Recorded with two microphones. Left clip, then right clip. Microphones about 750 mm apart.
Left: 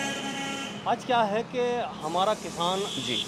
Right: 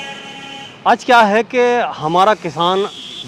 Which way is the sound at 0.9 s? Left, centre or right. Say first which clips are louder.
Right 15 dB; right.